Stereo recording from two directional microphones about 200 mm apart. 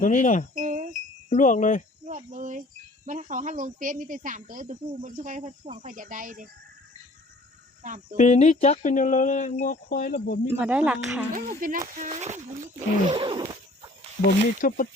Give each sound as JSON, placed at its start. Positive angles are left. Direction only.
{"t": 0.0, "sound": "speech", "side_deg": 40}
{"t": 0.5, "sound": "wind chime", "side_deg": -40}
{"t": 1.3, "sound": "speech", "side_deg": 40}
{"t": 2.0, "sound": "a woman's voice", "side_deg": -40}
{"t": 7.8, "sound": "speech", "side_deg": -40}
{"t": 8.1, "sound": "speech", "side_deg": 35}
{"t": 10.6, "sound": "speech", "side_deg": -5}
{"t": 11.3, "sound": "a woman's voice", "side_deg": -45}
{"t": 13.1, "sound": "zipper", "side_deg": -25}
{"t": 14.6, "sound": "speech", "side_deg": 45}